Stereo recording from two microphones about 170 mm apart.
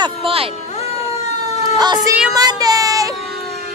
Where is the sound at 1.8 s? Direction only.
20° right (ahead or behind).